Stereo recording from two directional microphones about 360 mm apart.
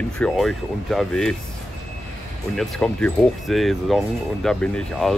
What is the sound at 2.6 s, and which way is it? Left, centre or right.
Speech, centre.